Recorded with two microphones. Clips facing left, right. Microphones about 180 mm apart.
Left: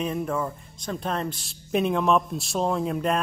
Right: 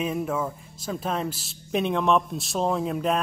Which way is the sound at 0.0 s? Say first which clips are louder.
Even; 5° right (ahead or behind).